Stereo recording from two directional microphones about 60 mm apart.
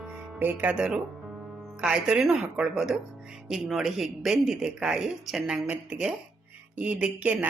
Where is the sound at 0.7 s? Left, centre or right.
Centre.